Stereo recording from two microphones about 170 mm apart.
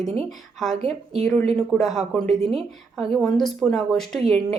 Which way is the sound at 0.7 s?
40° right (ahead or behind).